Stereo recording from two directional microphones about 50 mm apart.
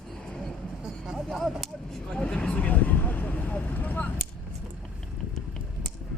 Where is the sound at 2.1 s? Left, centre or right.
Centre; by 4.1 s left.